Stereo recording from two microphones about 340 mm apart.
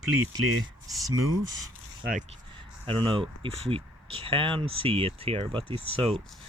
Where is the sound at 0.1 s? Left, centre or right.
Right.